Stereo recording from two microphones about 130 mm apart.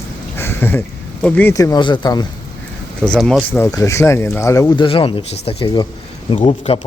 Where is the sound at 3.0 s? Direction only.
5° left (ahead or behind).